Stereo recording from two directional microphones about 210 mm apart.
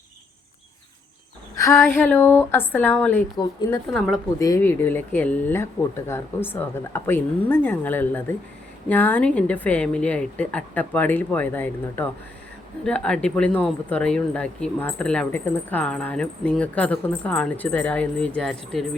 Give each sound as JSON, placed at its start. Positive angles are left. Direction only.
{"t": 1.6, "sound": "a woman's voice", "side_deg": 10}
{"t": 3.9, "sound": "speech", "side_deg": 0}
{"t": 4.4, "sound": "a woman's voice", "side_deg": 15}